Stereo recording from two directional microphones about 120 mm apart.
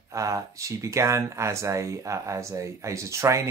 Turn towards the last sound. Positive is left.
turn(degrees=-25)  # may be behind; listen again after turning